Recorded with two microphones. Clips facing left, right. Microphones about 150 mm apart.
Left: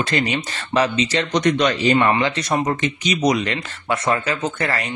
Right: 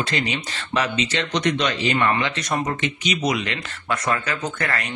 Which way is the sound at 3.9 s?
25° left (ahead or behind).